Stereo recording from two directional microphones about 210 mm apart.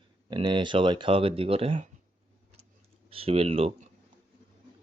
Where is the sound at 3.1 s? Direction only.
25° right (ahead or behind).